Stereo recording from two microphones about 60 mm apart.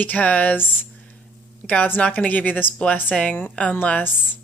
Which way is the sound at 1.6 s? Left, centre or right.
Centre.